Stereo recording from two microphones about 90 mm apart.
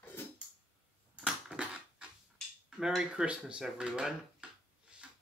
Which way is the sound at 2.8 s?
5° right (ahead or behind).